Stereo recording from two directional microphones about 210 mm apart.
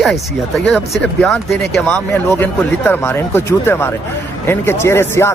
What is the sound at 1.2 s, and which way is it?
Speech, 5° left (ahead or behind).